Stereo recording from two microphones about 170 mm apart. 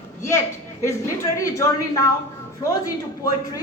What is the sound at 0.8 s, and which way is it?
Speech, 15° left (ahead or behind).